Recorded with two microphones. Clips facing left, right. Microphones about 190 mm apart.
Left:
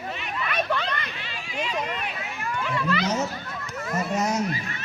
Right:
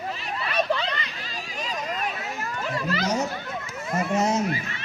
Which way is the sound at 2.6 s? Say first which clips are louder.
Left 1 dB; 40° right (ahead or behind).